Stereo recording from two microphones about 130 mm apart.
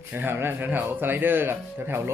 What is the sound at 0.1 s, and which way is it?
Speech, 15° right (ahead or behind).